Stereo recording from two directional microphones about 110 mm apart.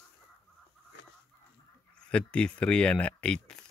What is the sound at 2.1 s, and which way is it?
Speech, 10° left (ahead or behind).